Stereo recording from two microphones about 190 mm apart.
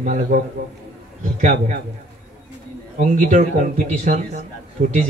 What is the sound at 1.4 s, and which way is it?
Speech, 40° right (ahead or behind).